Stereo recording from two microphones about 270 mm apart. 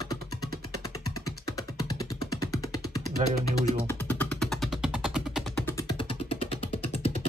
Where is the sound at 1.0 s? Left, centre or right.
Left.